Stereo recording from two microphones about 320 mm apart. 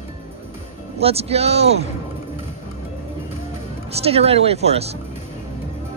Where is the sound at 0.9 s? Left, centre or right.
Centre.